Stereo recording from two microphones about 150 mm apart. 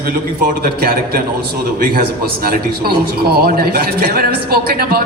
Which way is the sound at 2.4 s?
90° right.